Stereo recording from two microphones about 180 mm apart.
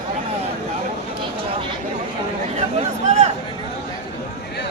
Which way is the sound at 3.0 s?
40° right (ahead or behind).